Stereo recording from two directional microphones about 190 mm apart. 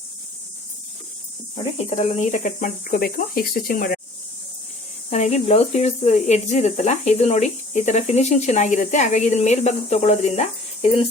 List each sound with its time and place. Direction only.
1.8 s speech: 40° left (ahead or behind)
5.1 s speech: 35° left (ahead or behind)